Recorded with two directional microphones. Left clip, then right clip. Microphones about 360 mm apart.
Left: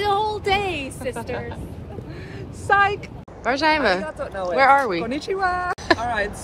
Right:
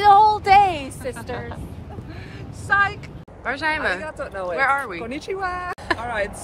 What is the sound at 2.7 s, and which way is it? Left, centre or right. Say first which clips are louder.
Speech: left 2 dB; centre.